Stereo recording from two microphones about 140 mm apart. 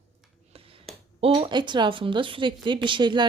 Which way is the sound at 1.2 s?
35° right (ahead or behind).